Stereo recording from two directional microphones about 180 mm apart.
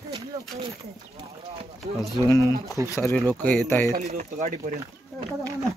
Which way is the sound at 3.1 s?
5° left (ahead or behind).